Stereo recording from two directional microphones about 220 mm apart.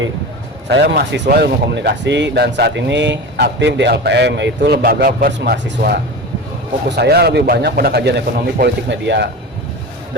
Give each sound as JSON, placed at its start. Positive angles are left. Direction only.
{"t": 0.7, "sound": "speech", "side_deg": -50}